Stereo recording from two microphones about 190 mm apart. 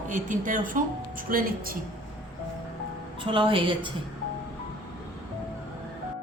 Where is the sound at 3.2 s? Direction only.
25° right (ahead or behind).